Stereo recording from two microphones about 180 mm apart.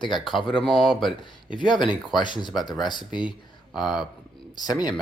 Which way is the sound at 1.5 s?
25° left (ahead or behind).